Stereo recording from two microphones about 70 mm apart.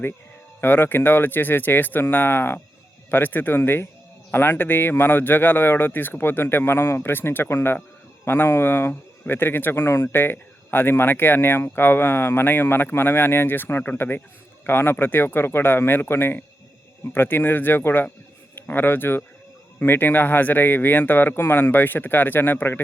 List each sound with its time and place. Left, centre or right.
0.6 s speech: left